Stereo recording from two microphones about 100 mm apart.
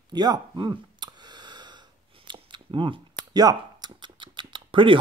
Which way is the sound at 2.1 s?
50° right (ahead or behind).